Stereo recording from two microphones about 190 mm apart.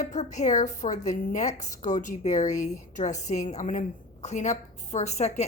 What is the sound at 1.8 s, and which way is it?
A woman's voice, 40° left (ahead or behind).